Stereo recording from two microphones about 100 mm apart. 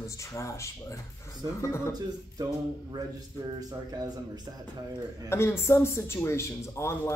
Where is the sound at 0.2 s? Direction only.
30° left (ahead or behind).